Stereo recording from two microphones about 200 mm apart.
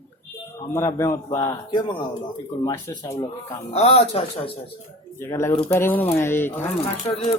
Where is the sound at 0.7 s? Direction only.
15° left (ahead or behind).